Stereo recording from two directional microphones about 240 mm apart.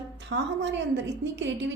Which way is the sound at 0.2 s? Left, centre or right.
Right.